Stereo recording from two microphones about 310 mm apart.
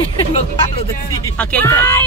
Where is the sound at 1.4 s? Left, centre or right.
Centre.